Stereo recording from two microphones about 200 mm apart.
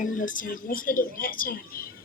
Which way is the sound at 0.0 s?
40° left (ahead or behind).